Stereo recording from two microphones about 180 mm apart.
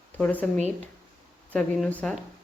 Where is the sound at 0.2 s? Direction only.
10° left (ahead or behind).